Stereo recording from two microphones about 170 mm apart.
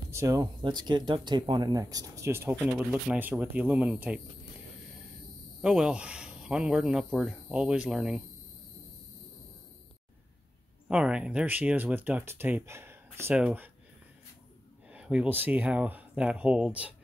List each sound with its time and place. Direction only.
0.1 s speech: 20° right (ahead or behind)
5.6 s speech: 5° right (ahead or behind)
10.9 s speech: 5° right (ahead or behind)
14.9 s speech: 5° right (ahead or behind)